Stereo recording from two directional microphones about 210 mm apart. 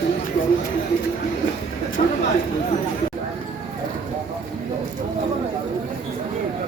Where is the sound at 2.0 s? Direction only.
40° left (ahead or behind).